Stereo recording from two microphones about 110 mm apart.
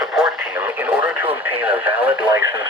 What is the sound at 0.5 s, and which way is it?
Speech, 15° right (ahead or behind).